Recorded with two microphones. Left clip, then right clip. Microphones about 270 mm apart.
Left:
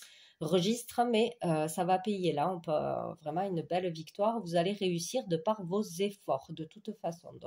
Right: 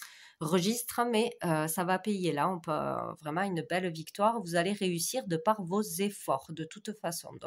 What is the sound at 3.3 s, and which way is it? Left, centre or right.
Speech, right.